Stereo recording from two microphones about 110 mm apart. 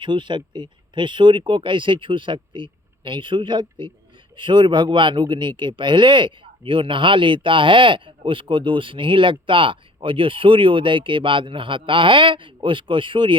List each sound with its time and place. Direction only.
0.0 s speech: 45° right (ahead or behind)